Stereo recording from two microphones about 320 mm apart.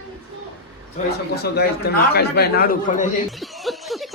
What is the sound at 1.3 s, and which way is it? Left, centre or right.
A man's voice, left.